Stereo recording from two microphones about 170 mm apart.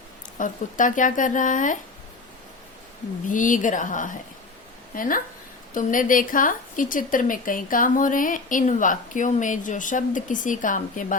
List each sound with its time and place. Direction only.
0.3 s a woman's voice: 50° left (ahead or behind)
3.2 s a woman's voice: 50° left (ahead or behind)